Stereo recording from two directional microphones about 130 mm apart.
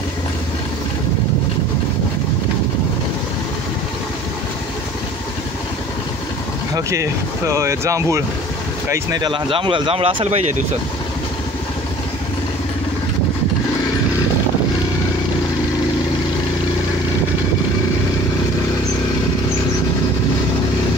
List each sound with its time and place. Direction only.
6.7 s speech: 20° right (ahead or behind); by 10.4 s 50° right (ahead or behind)